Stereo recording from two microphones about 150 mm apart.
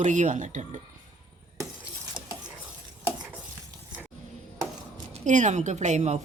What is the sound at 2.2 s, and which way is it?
Stir, 30° right (ahead or behind).